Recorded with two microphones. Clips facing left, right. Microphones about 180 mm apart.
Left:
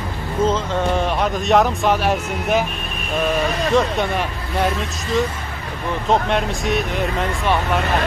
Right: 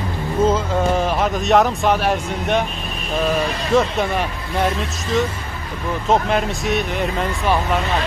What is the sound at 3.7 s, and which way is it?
A man's voice, centre (ahead or behind).